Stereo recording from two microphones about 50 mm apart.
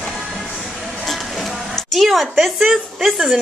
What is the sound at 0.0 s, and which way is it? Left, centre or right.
Music, centre.